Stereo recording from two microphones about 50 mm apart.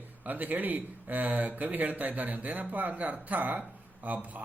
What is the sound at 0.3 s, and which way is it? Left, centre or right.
Speech, right.